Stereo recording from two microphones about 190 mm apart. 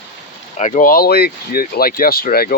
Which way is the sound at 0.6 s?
40° left (ahead or behind).